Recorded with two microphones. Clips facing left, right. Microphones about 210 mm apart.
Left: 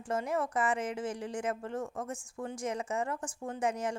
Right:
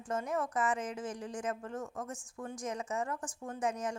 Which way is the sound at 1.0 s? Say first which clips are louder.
Left 4 dB; 10° left (ahead or behind).